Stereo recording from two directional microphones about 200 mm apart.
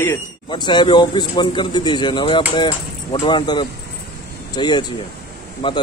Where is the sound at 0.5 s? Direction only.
25° left (ahead or behind).